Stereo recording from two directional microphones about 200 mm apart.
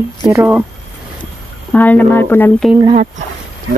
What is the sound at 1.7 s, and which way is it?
Speech, 10° left (ahead or behind).